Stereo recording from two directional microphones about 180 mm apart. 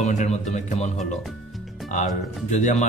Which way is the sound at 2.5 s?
40° left (ahead or behind).